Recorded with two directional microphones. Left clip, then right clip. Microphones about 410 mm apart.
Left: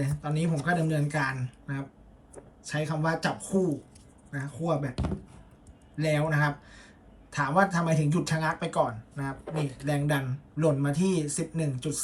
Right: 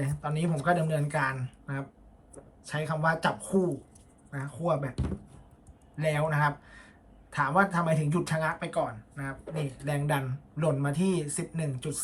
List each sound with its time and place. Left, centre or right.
0.0 s speech: centre